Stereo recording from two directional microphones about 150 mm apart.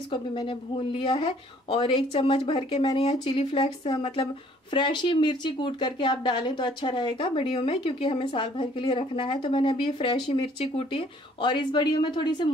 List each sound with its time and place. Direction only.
0.1 s speech: 35° left (ahead or behind)